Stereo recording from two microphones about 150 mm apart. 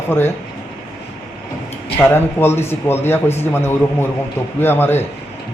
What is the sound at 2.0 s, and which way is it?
A man's voice, 15° left (ahead or behind).